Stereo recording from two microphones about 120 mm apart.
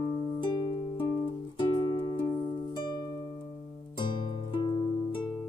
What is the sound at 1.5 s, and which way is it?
Music, 40° left (ahead or behind).